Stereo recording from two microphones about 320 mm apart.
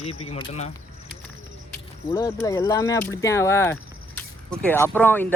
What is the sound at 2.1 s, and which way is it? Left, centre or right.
Speech, centre.